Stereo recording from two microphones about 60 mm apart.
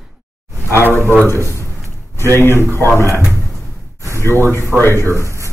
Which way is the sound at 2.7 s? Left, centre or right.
Right.